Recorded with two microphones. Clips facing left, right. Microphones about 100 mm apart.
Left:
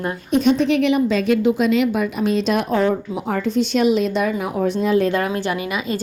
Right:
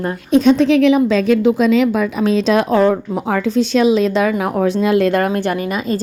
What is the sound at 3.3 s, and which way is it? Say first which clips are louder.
A woman's voice: right 4 dB; 90° right.